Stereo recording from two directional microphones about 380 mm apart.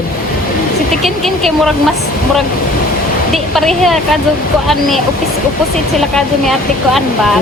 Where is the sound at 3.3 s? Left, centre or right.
Centre.